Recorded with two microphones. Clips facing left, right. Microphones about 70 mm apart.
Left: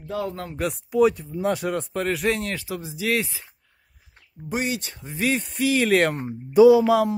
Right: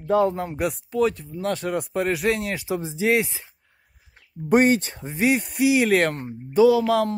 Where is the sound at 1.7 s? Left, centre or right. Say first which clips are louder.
Right 1 dB; centre.